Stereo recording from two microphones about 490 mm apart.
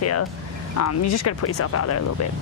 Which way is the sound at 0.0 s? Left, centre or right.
Left.